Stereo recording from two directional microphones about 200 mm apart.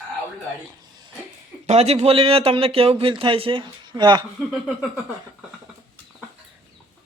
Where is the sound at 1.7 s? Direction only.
30° right (ahead or behind).